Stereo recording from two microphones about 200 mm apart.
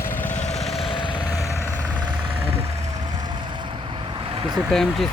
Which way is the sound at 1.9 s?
25° right (ahead or behind).